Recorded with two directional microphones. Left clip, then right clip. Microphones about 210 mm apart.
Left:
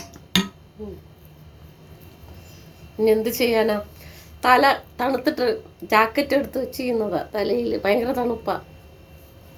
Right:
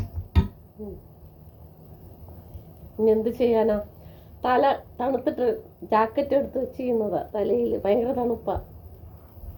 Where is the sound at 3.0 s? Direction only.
40° left (ahead or behind).